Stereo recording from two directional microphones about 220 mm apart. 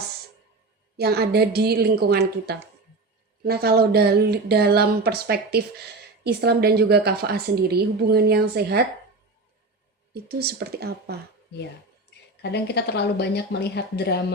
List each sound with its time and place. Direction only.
0.9 s a woman's voice: 45° right (ahead or behind)
10.2 s a woman's voice: 45° right (ahead or behind)
12.4 s a woman's voice: 50° left (ahead or behind)